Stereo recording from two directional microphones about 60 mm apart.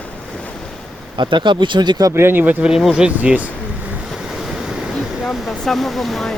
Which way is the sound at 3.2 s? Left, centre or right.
Right.